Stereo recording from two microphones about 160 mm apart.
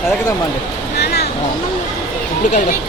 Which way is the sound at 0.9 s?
90° left.